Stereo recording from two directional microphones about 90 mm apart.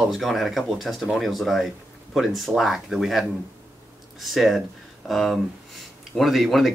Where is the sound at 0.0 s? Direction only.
Centre (ahead or behind).